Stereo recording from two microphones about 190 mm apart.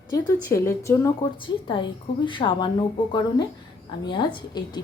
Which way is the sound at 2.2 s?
25° left (ahead or behind).